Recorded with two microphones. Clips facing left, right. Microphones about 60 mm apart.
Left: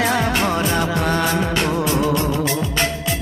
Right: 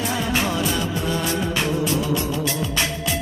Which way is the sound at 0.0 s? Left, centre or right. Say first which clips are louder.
Left 4 dB; left.